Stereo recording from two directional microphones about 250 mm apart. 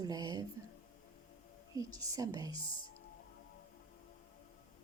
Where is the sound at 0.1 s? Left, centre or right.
Centre.